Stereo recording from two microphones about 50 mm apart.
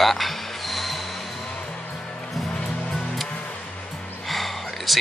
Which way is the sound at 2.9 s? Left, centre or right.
Centre.